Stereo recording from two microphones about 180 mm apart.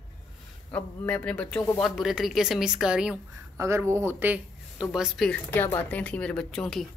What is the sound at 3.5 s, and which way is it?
Speech, 15° right (ahead or behind).